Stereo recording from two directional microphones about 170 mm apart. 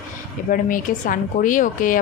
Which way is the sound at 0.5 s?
55° left (ahead or behind).